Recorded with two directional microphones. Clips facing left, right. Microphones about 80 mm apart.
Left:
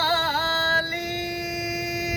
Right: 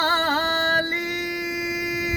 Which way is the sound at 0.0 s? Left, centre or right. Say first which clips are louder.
Right 2 dB; right.